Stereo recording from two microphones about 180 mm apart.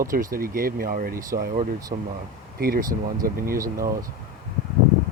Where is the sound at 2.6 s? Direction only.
55° right (ahead or behind).